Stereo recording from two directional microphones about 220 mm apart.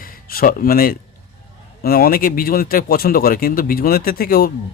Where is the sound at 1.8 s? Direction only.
45° left (ahead or behind).